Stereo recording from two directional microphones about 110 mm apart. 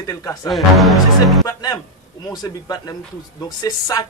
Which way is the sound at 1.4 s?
35° left (ahead or behind).